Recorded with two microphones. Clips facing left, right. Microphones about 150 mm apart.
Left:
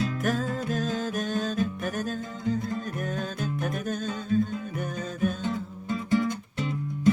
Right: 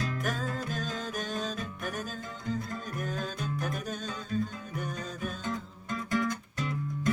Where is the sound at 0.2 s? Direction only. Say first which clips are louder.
Left 6 dB; centre (ahead or behind).